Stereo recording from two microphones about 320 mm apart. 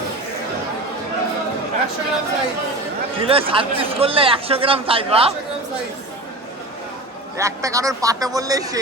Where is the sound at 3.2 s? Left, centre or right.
Centre.